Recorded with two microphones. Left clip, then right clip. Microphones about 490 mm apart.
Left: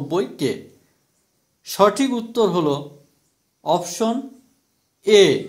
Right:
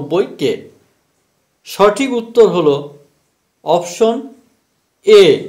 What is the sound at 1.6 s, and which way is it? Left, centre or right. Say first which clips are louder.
A man's voice: right 5 dB; left.